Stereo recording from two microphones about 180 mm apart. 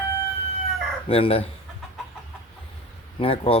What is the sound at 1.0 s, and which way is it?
Speech, 30° left (ahead or behind).